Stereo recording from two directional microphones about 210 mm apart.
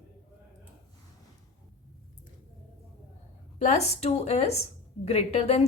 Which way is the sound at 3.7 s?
30° left (ahead or behind).